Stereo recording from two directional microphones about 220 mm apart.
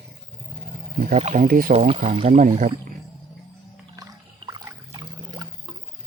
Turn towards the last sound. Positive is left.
turn(degrees=-20)  # may be behind; listen again after turning